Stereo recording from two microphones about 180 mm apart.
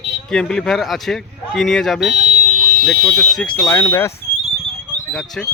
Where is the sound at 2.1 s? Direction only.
40° right (ahead or behind).